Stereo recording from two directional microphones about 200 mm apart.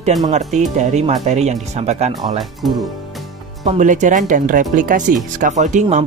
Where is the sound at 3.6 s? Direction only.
35° right (ahead or behind).